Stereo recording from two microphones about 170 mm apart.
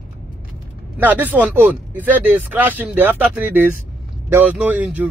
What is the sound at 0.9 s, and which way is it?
Speech, 10° right (ahead or behind).